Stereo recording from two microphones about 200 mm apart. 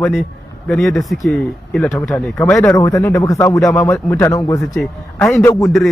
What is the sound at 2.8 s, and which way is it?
A man's voice, 15° left (ahead or behind).